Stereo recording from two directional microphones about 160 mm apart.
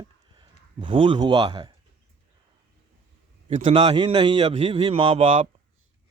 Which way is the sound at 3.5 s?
35° right (ahead or behind).